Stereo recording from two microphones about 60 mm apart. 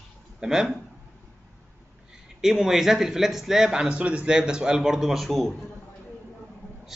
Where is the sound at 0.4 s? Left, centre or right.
Centre.